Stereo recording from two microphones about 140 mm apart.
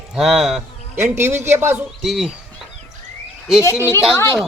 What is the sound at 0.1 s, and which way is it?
Speech, centre (ahead or behind).